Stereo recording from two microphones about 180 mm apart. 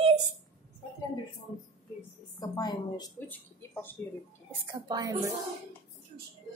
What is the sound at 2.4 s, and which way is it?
Speech, 20° left (ahead or behind).